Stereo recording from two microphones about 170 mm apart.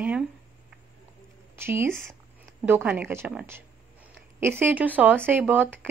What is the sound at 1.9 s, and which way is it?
Speech, 5° left (ahead or behind).